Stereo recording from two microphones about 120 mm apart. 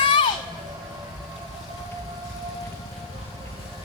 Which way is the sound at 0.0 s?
45° left (ahead or behind).